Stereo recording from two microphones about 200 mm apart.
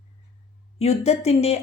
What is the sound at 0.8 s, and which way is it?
Speech, 30° left (ahead or behind).